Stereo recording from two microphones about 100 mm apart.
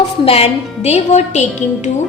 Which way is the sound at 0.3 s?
85° left.